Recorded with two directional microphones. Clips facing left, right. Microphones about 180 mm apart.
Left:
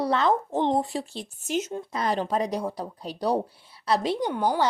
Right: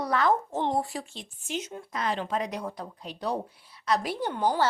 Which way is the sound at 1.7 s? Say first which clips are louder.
Left 4 dB; 30° left (ahead or behind).